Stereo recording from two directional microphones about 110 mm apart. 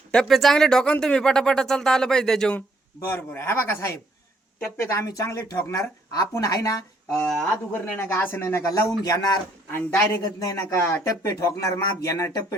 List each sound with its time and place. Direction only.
0.1 s speech: 5° left (ahead or behind)
2.6 s a woman's voice: 20° left (ahead or behind)
7.7 s a woman's voice: 15° left (ahead or behind); by 9.2 s 30° left (ahead or behind)
9.7 s a woman's voice: 20° left (ahead or behind)
10.4 s a woman's voice: 30° left (ahead or behind)